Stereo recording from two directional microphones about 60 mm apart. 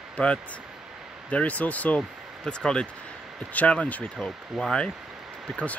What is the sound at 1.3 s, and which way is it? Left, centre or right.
Speech, left.